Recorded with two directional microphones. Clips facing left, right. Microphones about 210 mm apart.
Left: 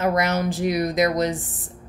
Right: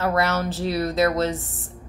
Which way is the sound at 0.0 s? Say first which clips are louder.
Left 1 dB; 15° left (ahead or behind).